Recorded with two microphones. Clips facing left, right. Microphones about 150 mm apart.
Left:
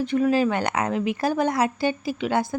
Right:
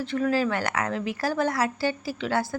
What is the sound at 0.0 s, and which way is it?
Speech, 15° left (ahead or behind).